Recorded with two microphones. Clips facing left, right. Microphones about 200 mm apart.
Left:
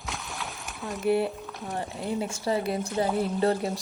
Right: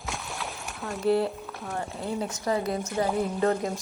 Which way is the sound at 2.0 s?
10° left (ahead or behind).